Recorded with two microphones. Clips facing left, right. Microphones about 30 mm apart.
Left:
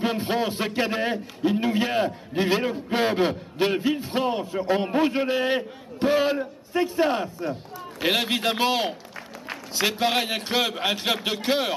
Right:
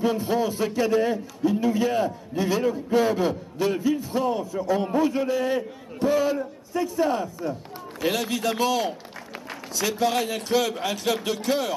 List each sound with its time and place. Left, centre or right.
0.0 s a man's voice: left